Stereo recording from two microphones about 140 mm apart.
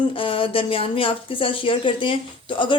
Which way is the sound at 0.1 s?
40° left (ahead or behind).